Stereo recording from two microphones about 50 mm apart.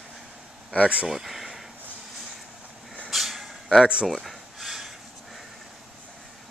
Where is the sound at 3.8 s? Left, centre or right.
Centre.